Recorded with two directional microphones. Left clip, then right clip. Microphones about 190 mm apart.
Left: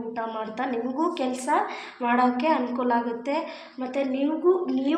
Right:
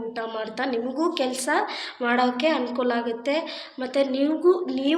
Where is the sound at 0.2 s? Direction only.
Centre (ahead or behind).